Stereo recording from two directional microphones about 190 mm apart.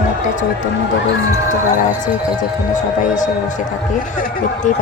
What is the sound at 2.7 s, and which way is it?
Speech, 40° left (ahead or behind).